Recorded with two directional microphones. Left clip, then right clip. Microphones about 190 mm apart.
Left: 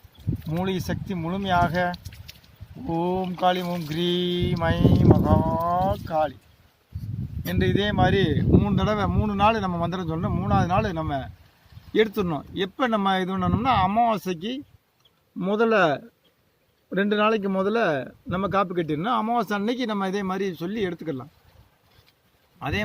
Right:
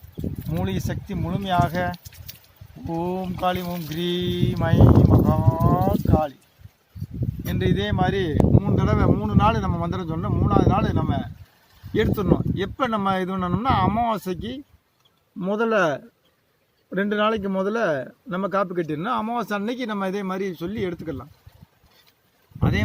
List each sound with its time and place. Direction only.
0.6 s speech: 25° left (ahead or behind)
7.4 s speech: 35° left (ahead or behind)